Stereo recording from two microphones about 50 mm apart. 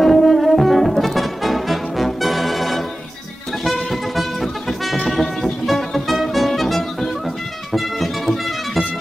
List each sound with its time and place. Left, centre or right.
0.0 s brass instrument: centre
3.6 s music: centre